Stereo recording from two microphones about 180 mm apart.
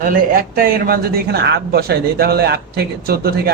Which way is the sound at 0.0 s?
50° right (ahead or behind).